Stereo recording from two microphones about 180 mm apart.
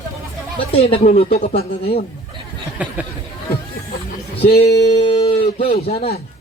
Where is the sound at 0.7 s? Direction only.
35° left (ahead or behind).